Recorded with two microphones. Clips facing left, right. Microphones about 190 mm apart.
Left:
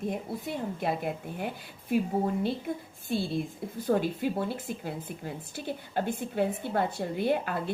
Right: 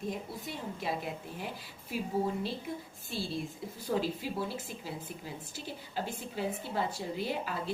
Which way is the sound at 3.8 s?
55° left (ahead or behind).